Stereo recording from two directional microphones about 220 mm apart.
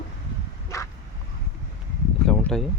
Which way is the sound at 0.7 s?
15° left (ahead or behind).